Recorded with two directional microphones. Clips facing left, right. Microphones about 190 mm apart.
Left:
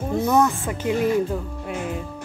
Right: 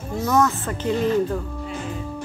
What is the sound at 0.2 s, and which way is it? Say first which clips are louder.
Speech: even; 15° left (ahead or behind).